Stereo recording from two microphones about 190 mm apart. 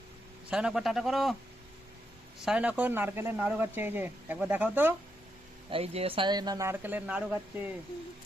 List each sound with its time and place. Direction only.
0.5 s a man's voice: 5° right (ahead or behind)
2.4 s speech: 5° right (ahead or behind)
5.7 s speech: 30° right (ahead or behind); by 7.7 s 10° right (ahead or behind)